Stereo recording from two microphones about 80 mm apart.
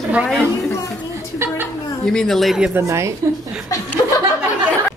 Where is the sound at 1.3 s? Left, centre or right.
Right.